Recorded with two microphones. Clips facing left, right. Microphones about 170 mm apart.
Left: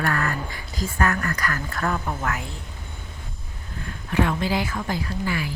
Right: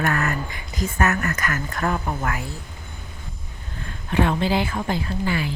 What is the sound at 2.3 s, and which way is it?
Speech, 5° right (ahead or behind).